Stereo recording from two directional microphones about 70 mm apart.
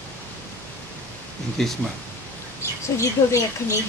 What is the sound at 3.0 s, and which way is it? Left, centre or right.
Speech, left.